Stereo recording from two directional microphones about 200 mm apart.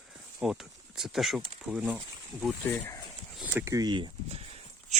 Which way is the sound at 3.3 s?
10° right (ahead or behind).